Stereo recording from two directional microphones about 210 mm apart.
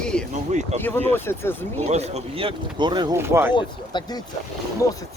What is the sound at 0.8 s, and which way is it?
Speech, 10° left (ahead or behind).